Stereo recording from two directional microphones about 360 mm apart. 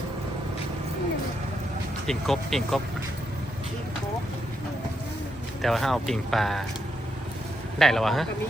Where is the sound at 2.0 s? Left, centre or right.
Centre.